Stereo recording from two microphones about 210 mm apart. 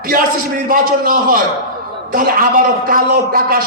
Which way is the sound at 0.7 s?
40° right (ahead or behind).